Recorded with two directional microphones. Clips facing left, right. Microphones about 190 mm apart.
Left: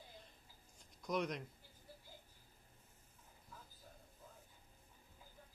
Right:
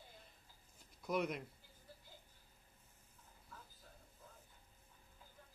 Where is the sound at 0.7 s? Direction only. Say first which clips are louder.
Right 1 dB; 5° right (ahead or behind).